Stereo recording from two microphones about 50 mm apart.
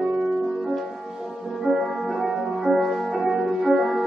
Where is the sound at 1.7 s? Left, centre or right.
Centre.